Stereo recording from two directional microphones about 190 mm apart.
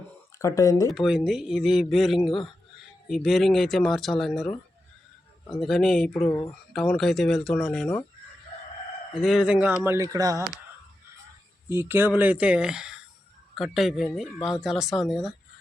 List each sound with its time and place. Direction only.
0.3 s speech: 15° left (ahead or behind)
0.9 s speech: centre (ahead or behind)
9.1 s speech: centre (ahead or behind); by 10.4 s 20° right (ahead or behind)
11.7 s speech: 10° right (ahead or behind)